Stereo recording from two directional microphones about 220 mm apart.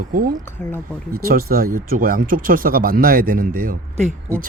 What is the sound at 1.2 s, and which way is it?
Speech, 40° right (ahead or behind).